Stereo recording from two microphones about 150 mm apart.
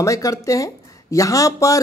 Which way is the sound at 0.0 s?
20° left (ahead or behind).